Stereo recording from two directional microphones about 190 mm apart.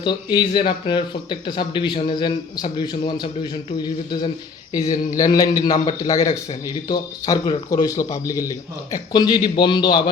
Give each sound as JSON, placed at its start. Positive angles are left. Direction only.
{"t": 0.0, "sound": "speech", "side_deg": 25}